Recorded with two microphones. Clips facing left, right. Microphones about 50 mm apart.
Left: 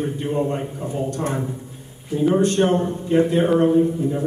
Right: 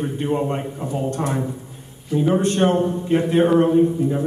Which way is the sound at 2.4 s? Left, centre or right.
Right.